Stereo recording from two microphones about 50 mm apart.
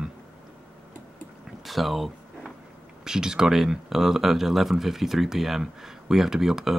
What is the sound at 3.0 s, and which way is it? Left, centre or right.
Speech, centre.